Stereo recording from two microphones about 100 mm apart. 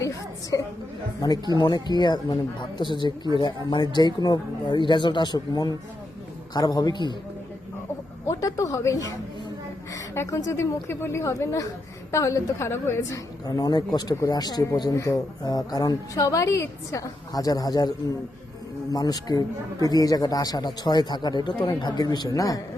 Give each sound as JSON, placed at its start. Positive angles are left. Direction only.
{"t": 0.5, "sound": "a sound", "side_deg": 35}
{"t": 1.5, "sound": "speech", "side_deg": 50}
{"t": 8.3, "sound": "a woman's voice", "side_deg": 35}
{"t": 13.5, "sound": "speech", "side_deg": 40}